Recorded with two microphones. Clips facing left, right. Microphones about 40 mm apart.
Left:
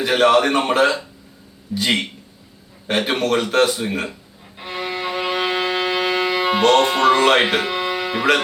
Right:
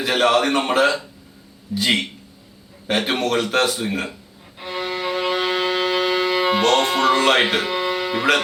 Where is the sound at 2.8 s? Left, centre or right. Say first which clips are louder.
Left 1 dB; centre.